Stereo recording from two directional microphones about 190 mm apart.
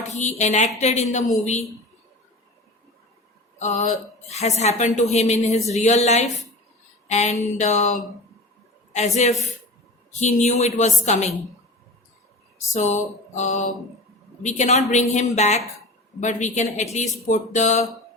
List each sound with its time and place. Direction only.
0.1 s speech: 40° left (ahead or behind)
3.6 s a woman's voice: 40° left (ahead or behind)
12.7 s speech: 40° left (ahead or behind)